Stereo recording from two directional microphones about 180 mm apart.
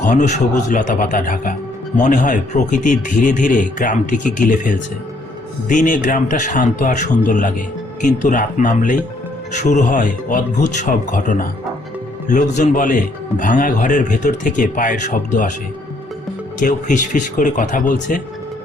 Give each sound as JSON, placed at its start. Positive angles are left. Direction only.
{"t": 0.0, "sound": "a man's voice", "side_deg": 45}
{"t": 16.6, "sound": "a man's voice", "side_deg": 45}